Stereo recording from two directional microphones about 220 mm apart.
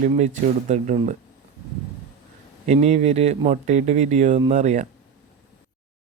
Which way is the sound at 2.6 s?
30° right (ahead or behind).